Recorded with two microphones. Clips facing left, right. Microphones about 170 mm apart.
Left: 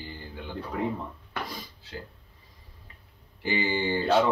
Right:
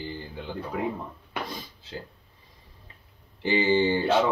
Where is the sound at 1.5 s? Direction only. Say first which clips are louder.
Right 2 dB; 20° right (ahead or behind).